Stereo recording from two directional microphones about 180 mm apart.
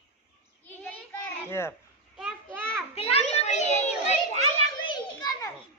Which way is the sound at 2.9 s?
35° left (ahead or behind).